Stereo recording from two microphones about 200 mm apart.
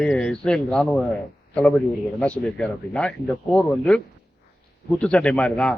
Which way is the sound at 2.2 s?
5° left (ahead or behind).